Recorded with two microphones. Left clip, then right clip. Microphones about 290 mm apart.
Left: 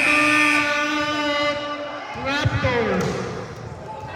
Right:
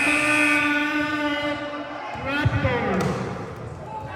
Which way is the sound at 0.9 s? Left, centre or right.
Left.